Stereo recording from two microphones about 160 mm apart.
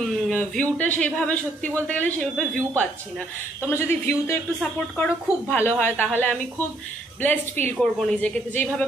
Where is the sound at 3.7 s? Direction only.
15° left (ahead or behind).